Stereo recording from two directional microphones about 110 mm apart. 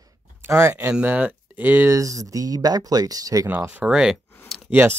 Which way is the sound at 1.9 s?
30° right (ahead or behind).